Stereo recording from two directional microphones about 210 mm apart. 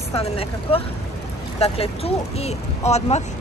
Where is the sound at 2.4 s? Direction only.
30° left (ahead or behind).